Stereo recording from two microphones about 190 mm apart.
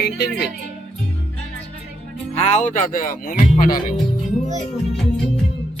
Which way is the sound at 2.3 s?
35° left (ahead or behind).